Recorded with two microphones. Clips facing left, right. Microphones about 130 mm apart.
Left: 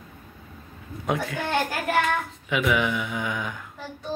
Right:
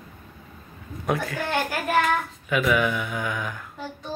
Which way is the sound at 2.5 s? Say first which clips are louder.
Right 1 dB; 20° left (ahead or behind).